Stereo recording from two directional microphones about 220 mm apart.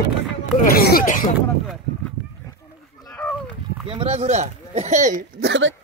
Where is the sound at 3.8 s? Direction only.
25° right (ahead or behind).